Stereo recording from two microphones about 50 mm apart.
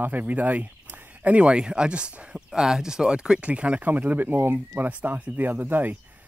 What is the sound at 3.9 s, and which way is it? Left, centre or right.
Speech, right.